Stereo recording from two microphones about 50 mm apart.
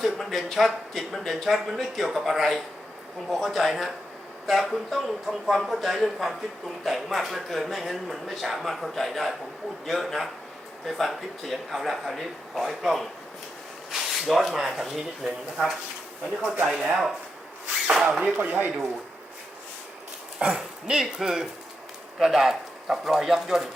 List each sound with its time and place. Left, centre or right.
0.0 s a man's voice: centre
18.3 s speech: right
20.4 s speech: right